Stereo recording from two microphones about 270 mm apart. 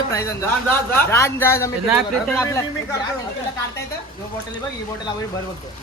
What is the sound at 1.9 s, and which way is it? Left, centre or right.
Speech, centre.